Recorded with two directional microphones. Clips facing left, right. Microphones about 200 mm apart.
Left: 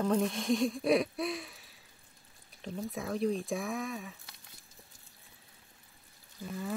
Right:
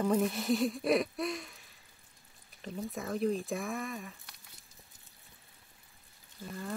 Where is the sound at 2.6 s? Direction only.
Centre (ahead or behind).